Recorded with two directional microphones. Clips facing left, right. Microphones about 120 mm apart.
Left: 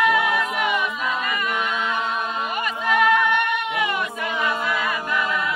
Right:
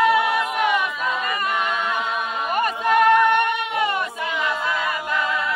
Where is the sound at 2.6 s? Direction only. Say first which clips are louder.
Right 4 dB; 45° right (ahead or behind).